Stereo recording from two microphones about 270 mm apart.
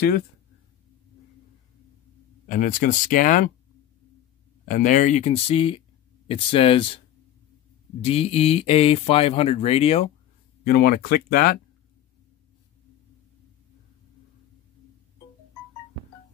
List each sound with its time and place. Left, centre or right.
2.4 s speech: left
4.6 s speech: left
8.0 s speech: left
10.6 s speech: left